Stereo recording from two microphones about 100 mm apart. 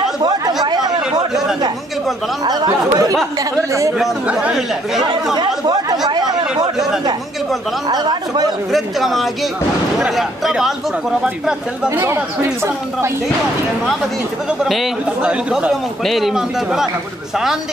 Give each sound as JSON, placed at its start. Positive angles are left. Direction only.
{"t": 0.2, "sound": "chatter", "side_deg": -45}
{"t": 2.4, "sound": "speech", "side_deg": -45}
{"t": 4.0, "sound": "speech", "side_deg": -10}
{"t": 5.3, "sound": "speech", "side_deg": -45}
{"t": 7.9, "sound": "speech", "side_deg": -45}
{"t": 8.7, "sound": "speech", "side_deg": 0}
{"t": 11.9, "sound": "speech", "side_deg": -25}
{"t": 14.6, "sound": "speech", "side_deg": 0}
{"t": 15.0, "sound": "speech", "side_deg": -10}
{"t": 16.0, "sound": "speech", "side_deg": 0}